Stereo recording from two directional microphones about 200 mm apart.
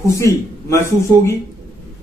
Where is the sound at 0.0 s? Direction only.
15° left (ahead or behind).